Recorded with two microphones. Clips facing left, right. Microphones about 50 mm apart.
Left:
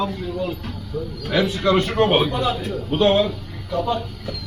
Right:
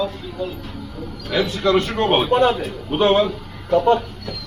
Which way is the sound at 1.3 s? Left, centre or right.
Centre.